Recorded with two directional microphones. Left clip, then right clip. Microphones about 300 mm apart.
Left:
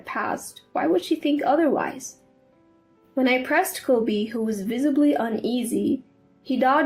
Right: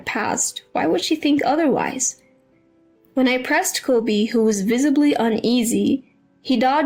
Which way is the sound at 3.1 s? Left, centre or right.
Right.